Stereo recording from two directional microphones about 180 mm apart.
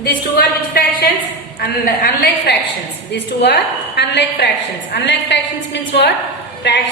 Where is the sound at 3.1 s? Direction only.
70° left (ahead or behind).